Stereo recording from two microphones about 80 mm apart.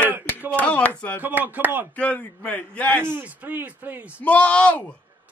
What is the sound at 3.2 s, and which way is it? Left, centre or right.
A man's voice, centre.